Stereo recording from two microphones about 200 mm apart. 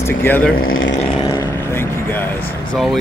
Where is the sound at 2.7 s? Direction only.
Centre (ahead or behind).